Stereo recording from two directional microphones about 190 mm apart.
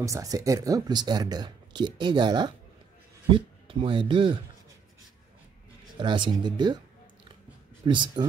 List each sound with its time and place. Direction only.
0.0 s speech: 15° right (ahead or behind)
5.9 s speech: 25° right (ahead or behind)
7.8 s speech: 25° right (ahead or behind)